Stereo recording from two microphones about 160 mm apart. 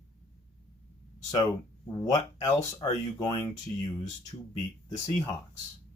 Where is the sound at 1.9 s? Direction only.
25° left (ahead or behind).